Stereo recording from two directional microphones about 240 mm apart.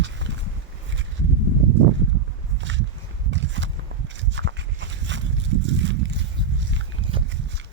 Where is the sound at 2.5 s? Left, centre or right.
Right.